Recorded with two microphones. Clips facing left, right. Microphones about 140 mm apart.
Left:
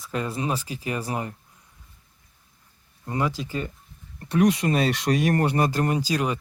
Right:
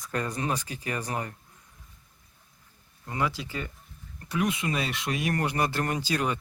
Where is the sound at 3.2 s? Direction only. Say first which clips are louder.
Left 4 dB; 40° left (ahead or behind).